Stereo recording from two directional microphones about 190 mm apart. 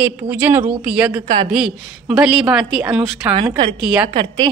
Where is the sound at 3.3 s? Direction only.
25° right (ahead or behind).